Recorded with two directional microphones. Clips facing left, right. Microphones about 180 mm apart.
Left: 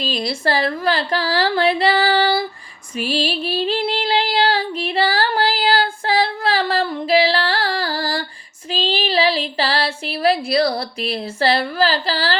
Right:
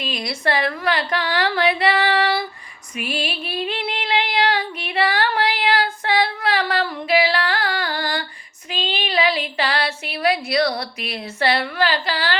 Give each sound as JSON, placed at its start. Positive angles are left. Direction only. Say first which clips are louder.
{"t": 0.0, "sound": "a woman's voice", "louder": "left 3 dB", "side_deg": 30}
{"t": 2.9, "sound": "female singing", "louder": "left 5 dB", "side_deg": 30}
{"t": 8.7, "sound": "a sound", "louder": "left 4 dB", "side_deg": 30}